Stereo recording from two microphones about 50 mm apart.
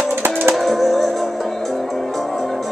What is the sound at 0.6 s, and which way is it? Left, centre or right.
Music, centre.